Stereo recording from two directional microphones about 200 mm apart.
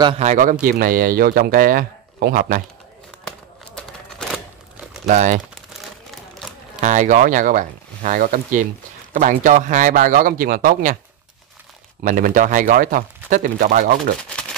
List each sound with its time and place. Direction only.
0.2 s speech: 40° right (ahead or behind)
3.3 s a sound: 5° left (ahead or behind)
5.0 s speech: 40° right (ahead or behind)
5.5 s crumpling: centre (ahead or behind)
6.8 s speech: 35° right (ahead or behind)
12.0 s speech: 40° right (ahead or behind)